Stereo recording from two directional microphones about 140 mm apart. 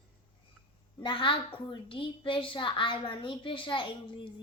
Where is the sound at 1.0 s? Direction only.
40° left (ahead or behind).